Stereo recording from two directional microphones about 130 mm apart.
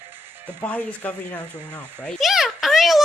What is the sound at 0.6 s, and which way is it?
Speech, 10° left (ahead or behind).